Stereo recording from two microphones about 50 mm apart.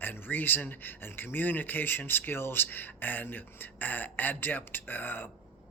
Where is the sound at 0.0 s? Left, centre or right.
Left.